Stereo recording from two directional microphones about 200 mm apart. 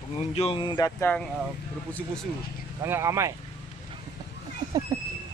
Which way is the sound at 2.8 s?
15° right (ahead or behind).